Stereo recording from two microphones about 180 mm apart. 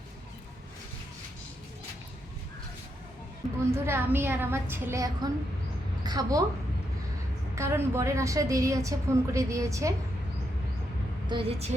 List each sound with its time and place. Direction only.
3.8 s a woman's voice: 10° right (ahead or behind)
6.0 s a sound: 20° right (ahead or behind)
7.5 s a woman's voice: 15° right (ahead or behind)
11.3 s a woman's voice: 30° right (ahead or behind)